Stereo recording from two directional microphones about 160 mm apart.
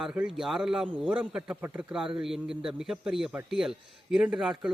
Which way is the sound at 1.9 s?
5° right (ahead or behind).